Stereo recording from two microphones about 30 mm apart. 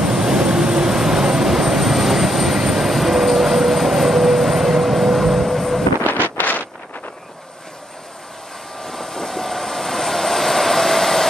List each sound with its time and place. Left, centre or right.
0.0 s vehicle: centre
6.2 s wind noise: left
8.8 s vehicle: centre